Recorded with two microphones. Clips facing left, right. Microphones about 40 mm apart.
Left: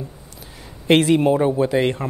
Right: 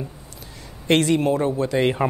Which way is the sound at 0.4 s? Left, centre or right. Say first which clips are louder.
Left 2 dB; centre.